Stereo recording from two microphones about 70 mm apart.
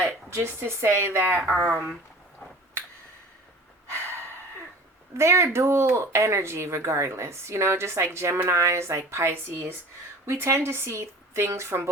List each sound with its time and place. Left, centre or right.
0.0 s speech: right
3.8 s snort: right
5.1 s speech: right